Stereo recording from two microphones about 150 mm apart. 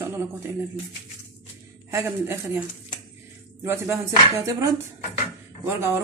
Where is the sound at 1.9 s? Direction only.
15° right (ahead or behind).